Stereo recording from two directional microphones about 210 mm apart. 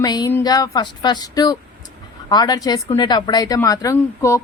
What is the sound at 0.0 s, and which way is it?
A woman's voice, 20° left (ahead or behind).